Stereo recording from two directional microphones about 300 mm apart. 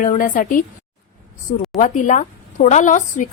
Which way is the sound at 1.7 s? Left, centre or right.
Left.